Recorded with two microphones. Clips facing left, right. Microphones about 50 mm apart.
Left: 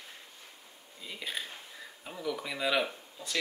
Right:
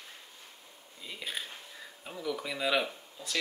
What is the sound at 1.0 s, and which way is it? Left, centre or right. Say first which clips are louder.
Speech: left 1 dB; centre.